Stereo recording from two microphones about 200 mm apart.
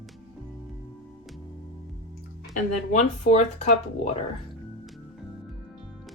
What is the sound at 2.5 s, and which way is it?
Speech, 35° left (ahead or behind).